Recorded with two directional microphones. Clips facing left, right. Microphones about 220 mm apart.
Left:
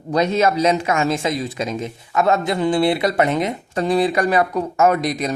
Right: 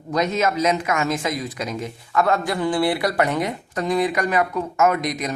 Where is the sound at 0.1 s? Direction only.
30° left (ahead or behind).